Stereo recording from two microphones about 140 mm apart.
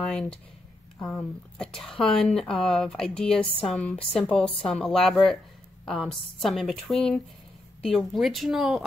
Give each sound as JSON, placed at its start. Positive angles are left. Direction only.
{"t": 0.0, "sound": "speech", "side_deg": 5}